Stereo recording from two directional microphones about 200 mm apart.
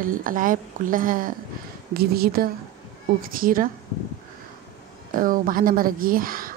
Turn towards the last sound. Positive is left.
turn(degrees=-45)  # may be behind; listen again after turning